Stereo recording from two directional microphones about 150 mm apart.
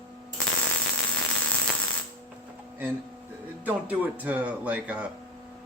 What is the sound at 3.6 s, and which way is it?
Speech, 10° right (ahead or behind).